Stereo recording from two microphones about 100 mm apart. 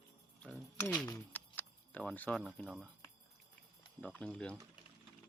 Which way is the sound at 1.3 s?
15° left (ahead or behind).